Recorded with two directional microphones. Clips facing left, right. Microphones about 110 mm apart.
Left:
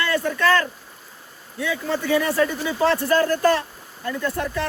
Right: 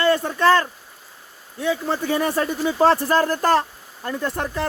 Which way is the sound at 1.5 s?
35° right (ahead or behind).